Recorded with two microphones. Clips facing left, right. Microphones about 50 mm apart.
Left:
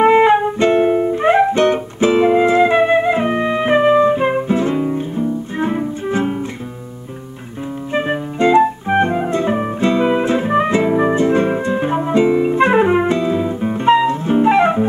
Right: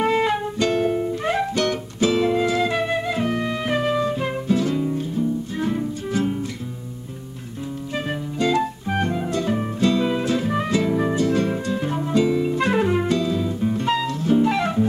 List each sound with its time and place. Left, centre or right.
0.0 s music: left
7.9 s music: left